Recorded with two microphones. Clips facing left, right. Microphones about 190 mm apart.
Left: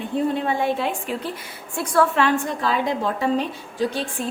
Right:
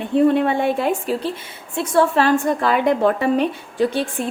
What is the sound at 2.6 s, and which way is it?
A woman's voice, 60° right (ahead or behind).